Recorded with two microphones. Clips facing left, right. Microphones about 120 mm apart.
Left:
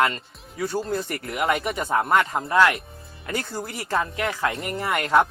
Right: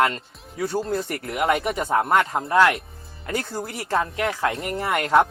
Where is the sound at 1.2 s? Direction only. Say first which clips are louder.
Right 2 dB; 30° right (ahead or behind); by 4.0 s 50° right (ahead or behind).